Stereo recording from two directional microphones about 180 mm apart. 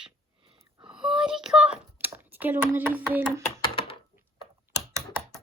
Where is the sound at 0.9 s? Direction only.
5° right (ahead or behind).